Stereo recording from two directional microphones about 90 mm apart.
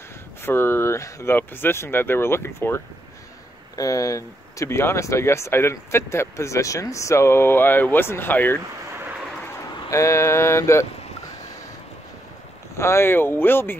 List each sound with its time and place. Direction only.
0.4 s speech: 25° left (ahead or behind)
3.7 s speech: 40° left (ahead or behind); by 8.5 s 25° left (ahead or behind)
9.8 s speech: 35° left (ahead or behind)
12.7 s speech: 30° left (ahead or behind)